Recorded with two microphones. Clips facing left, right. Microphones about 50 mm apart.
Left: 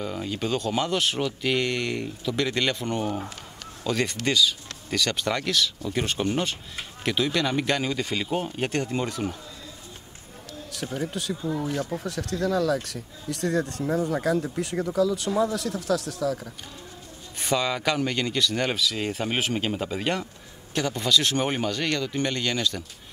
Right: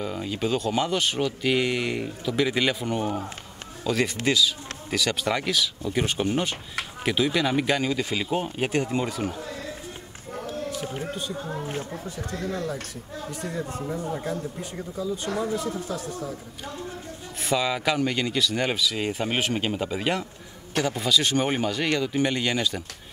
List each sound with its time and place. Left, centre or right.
0.0 s speech: centre
9.4 s a sound: right
11.2 s speech: left
11.6 s speech: right
12.0 s speech: left
17.4 s speech: centre